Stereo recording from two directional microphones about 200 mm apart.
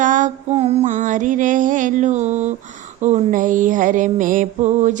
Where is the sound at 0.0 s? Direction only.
40° right (ahead or behind).